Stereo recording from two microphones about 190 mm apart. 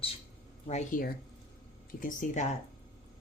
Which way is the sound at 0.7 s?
40° left (ahead or behind).